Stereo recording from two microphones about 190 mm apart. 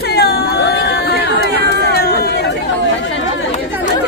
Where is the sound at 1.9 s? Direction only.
55° left (ahead or behind).